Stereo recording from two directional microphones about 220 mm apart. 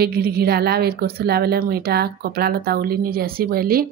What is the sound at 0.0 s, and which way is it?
A woman's voice, 45° right (ahead or behind).